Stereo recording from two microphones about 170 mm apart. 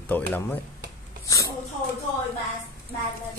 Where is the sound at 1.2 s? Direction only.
20° left (ahead or behind).